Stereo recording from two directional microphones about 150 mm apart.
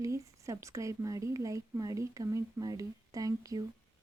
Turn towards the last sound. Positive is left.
turn(degrees=-25)  # may be behind; listen again after turning